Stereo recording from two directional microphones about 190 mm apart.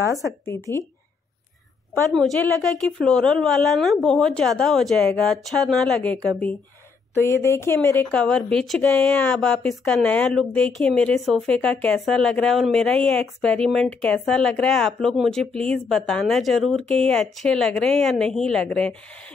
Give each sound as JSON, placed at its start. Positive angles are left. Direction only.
{"t": 0.5, "sound": "speech", "side_deg": 15}
{"t": 2.0, "sound": "speech", "side_deg": 0}
{"t": 7.2, "sound": "speech", "side_deg": 15}